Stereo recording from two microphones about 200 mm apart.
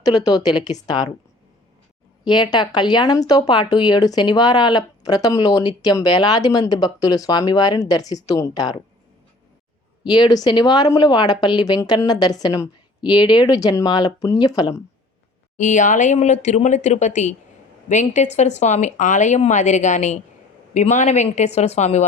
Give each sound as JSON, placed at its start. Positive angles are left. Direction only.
{"t": 0.0, "sound": "speech", "side_deg": 20}
{"t": 2.2, "sound": "speech", "side_deg": 20}
{"t": 10.0, "sound": "speech", "side_deg": 20}
{"t": 15.5, "sound": "speech", "side_deg": 40}